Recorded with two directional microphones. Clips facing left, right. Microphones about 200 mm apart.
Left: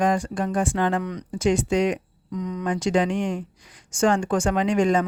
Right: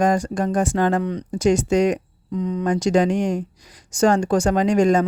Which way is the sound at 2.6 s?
40° right (ahead or behind).